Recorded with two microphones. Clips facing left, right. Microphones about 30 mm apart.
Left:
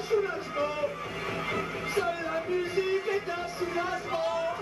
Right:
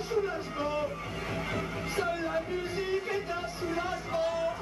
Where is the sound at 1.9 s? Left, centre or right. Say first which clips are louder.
Left 1 dB; centre.